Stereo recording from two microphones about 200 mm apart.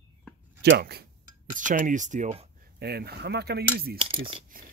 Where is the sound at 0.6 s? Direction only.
55° right (ahead or behind).